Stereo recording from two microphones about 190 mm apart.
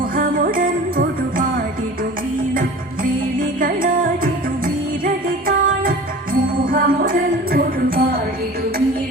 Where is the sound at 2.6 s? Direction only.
45° right (ahead or behind).